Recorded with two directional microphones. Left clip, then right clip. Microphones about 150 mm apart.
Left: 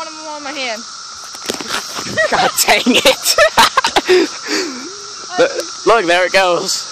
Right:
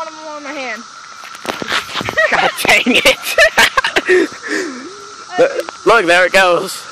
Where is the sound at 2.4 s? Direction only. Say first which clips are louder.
Right 1 dB; 20° left (ahead or behind).